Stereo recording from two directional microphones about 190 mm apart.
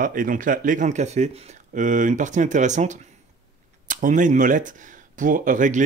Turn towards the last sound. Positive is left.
turn(degrees=-40)  # may be behind; listen again after turning